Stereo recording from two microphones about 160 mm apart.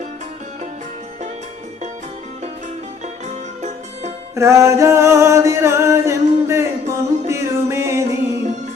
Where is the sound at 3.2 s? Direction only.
45° right (ahead or behind).